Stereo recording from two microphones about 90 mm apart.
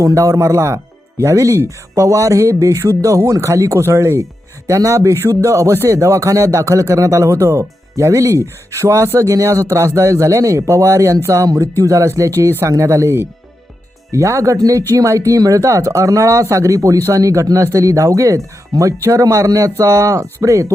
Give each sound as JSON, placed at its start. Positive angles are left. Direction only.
{"t": 0.0, "sound": "speech", "side_deg": -40}